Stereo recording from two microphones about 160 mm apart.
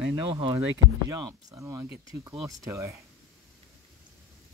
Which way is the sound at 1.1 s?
20° right (ahead or behind).